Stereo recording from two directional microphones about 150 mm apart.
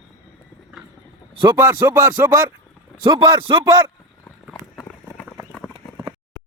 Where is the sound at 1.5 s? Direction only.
15° right (ahead or behind).